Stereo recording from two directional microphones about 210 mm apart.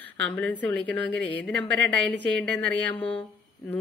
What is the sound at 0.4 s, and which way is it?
Speech, 10° left (ahead or behind).